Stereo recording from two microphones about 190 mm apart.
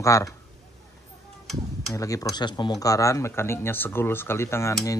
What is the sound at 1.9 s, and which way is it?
Speech, 15° left (ahead or behind).